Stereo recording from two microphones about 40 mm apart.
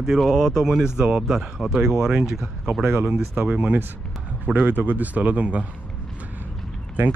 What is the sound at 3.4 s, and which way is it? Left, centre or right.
Speech, right.